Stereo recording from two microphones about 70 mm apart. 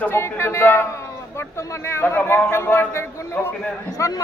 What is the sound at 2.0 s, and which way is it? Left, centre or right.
A man's voice, left.